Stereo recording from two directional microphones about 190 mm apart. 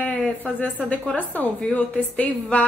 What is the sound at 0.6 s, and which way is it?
A woman's voice, 10° left (ahead or behind).